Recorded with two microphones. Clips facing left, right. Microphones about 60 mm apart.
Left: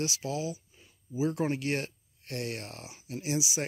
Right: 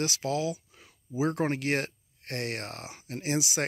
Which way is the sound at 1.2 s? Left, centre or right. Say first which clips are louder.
Right 2 dB; right.